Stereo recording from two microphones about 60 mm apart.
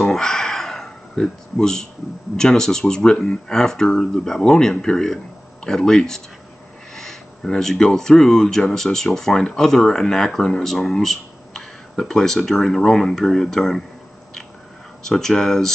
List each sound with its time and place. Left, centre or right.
0.0 s a sound: centre
2.3 s speech: centre
15.0 s speech: centre